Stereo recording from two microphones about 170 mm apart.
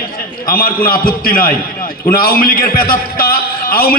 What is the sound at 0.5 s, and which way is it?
A man's voice, 60° left (ahead or behind).